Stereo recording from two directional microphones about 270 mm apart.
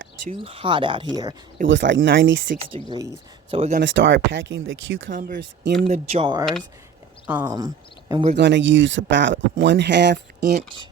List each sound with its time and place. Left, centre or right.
0.3 s speech: right
1.6 s speech: right
2.7 s speech: centre
3.8 s speech: right
5.8 s speech: right
8.4 s speech: right